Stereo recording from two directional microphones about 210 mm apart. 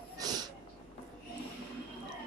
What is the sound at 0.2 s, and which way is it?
Snort, 20° right (ahead or behind).